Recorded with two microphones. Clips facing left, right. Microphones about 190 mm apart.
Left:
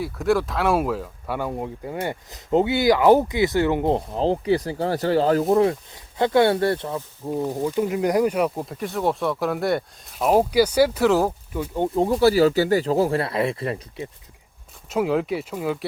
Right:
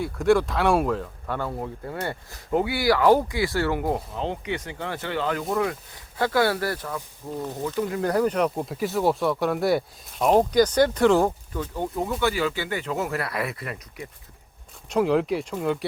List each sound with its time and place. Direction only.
0.0 s speech: centre (ahead or behind); by 5.7 s 35° left (ahead or behind)
6.1 s speech: 25° left (ahead or behind); by 11.3 s 5° left (ahead or behind)
11.5 s speech: 20° left (ahead or behind)
14.8 s speech: centre (ahead or behind)